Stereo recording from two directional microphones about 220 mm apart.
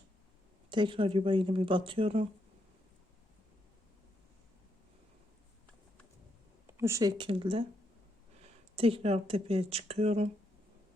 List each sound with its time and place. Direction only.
0.7 s speech: 20° right (ahead or behind)
6.7 s speech: 10° right (ahead or behind)
8.7 s speech: 25° right (ahead or behind)